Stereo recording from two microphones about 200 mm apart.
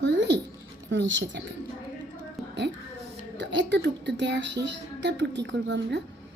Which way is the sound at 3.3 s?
65° right (ahead or behind).